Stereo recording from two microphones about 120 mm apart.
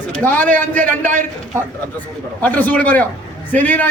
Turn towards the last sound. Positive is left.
turn(degrees=15)  # may be behind; listen again after turning